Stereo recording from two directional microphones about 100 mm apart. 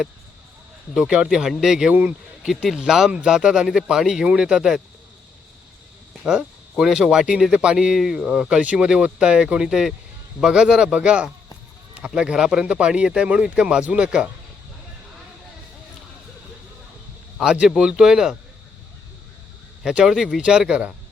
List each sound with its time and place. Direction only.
0.9 s speech: 5° right (ahead or behind)
1.9 s speech: 15° right (ahead or behind)
2.5 s speech: 5° right (ahead or behind)
6.2 s speech: 5° right (ahead or behind)
17.3 s speech: 10° right (ahead or behind)
19.8 s speech: 5° right (ahead or behind)